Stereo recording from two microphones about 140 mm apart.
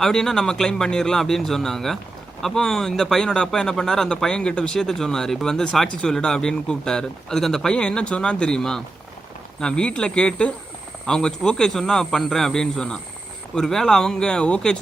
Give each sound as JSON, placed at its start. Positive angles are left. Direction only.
{"t": 0.0, "sound": "speech", "side_deg": 5}